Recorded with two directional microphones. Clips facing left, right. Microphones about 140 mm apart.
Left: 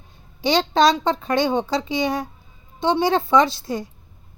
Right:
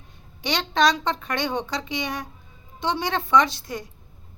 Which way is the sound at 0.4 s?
30° left (ahead or behind).